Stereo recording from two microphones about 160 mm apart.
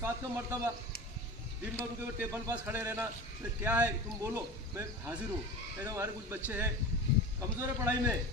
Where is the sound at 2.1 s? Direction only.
20° right (ahead or behind).